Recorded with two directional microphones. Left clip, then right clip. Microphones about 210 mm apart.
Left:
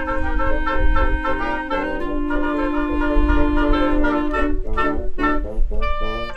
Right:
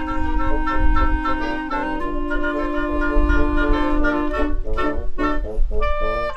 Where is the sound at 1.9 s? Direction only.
25° right (ahead or behind).